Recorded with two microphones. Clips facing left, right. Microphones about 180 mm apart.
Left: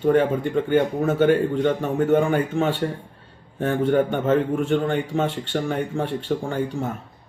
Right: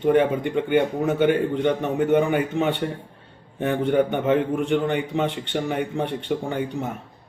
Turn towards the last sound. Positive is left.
turn(degrees=-20)  # may be behind; listen again after turning